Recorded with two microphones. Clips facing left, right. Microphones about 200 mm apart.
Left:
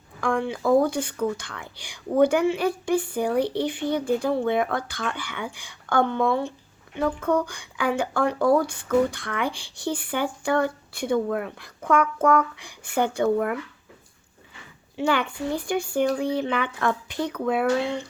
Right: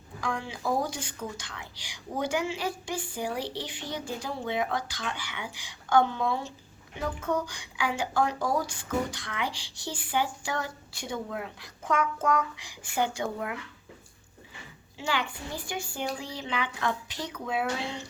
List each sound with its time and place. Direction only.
0.2 s a woman's voice: 55° left (ahead or behind)
14.9 s a woman's voice: 60° left (ahead or behind)